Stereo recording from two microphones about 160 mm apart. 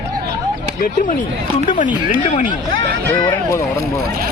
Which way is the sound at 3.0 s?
15° left (ahead or behind).